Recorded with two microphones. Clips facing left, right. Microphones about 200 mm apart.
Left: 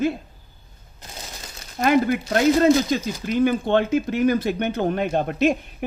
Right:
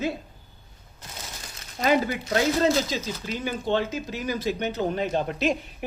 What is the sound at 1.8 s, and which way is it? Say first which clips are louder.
A woman's voice: left 4 dB; 55° left (ahead or behind).